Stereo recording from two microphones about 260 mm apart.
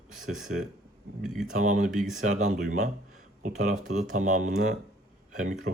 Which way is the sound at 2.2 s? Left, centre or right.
Right.